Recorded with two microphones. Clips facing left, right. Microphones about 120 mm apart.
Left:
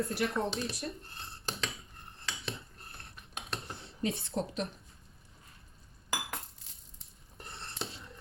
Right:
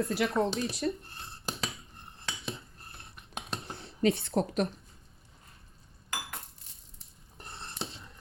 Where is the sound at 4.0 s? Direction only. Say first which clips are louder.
Right 7 dB; 75° right (ahead or behind).